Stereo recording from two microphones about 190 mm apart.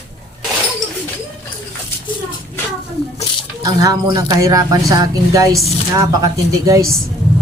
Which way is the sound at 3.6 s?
20° right (ahead or behind).